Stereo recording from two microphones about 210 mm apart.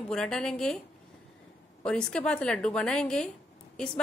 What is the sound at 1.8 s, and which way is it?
A woman's voice, 5° left (ahead or behind).